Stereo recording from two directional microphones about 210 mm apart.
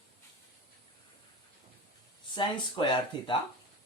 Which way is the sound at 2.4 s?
25° left (ahead or behind).